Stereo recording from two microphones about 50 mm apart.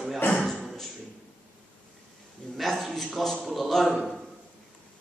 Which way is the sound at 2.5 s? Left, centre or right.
Centre.